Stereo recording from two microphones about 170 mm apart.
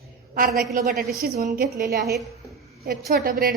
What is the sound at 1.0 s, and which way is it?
Speech, 65° right (ahead or behind).